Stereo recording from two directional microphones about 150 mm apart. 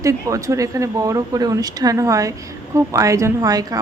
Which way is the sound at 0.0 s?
20° right (ahead or behind).